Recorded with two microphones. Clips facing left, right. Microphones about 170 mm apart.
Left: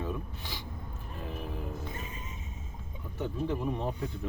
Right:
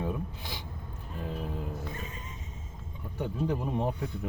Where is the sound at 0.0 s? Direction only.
15° right (ahead or behind).